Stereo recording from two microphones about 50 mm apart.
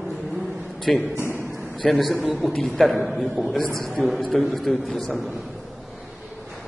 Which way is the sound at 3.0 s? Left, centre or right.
Centre.